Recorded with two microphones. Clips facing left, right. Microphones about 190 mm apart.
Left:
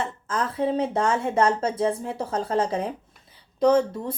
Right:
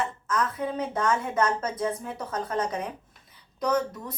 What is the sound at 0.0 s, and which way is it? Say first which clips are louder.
Speech: even; 30° left (ahead or behind).